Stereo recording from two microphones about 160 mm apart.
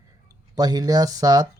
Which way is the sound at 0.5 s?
25° right (ahead or behind).